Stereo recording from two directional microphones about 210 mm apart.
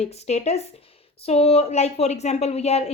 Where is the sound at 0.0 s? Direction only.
30° left (ahead or behind).